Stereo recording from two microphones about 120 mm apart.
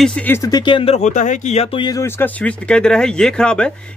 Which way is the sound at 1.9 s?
25° left (ahead or behind).